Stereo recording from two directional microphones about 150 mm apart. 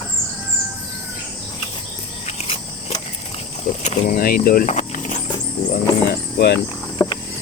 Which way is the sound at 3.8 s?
55° left (ahead or behind).